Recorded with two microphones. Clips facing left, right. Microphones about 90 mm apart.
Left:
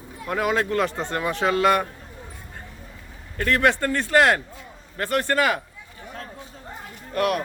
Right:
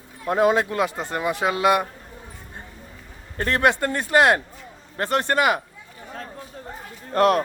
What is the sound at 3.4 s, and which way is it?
A man's voice, 25° right (ahead or behind).